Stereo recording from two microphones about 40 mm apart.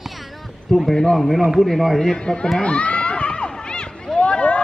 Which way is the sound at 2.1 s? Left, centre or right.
Left.